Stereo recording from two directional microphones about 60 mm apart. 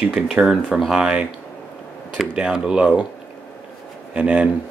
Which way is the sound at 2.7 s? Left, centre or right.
Right.